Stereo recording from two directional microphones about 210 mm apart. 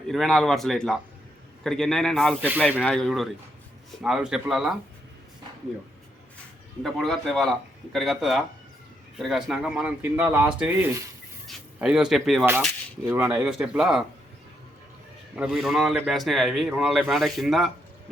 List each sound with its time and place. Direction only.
0.1 s a man's voice: centre (ahead or behind)
6.8 s a man's voice: centre (ahead or behind)
15.4 s a man's voice: centre (ahead or behind)